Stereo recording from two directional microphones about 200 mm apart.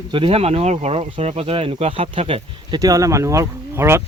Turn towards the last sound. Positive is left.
turn(degrees=-10)  # may be behind; listen again after turning